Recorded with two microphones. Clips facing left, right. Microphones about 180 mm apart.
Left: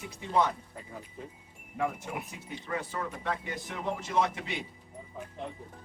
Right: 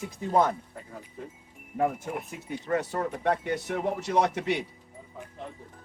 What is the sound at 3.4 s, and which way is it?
Speech, 65° right (ahead or behind).